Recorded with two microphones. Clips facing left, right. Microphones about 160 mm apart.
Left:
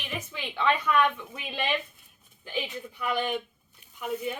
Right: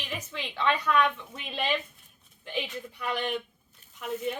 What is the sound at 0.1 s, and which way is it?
A woman's voice, centre (ahead or behind).